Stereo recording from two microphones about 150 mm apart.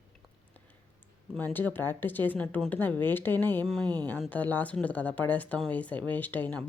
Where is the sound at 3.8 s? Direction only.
25° right (ahead or behind).